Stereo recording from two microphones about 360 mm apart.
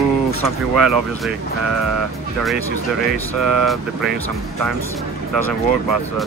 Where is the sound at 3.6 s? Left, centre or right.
Centre.